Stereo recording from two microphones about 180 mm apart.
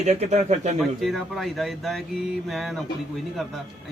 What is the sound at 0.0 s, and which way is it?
Speech, 40° right (ahead or behind).